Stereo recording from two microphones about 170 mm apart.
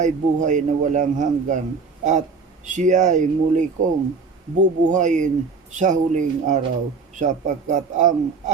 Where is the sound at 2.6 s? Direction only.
45° right (ahead or behind).